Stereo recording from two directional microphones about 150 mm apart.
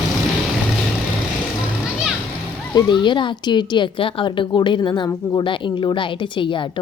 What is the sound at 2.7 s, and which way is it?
A woman's voice, 30° left (ahead or behind).